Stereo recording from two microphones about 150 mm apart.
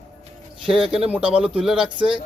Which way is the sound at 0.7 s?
Centre (ahead or behind).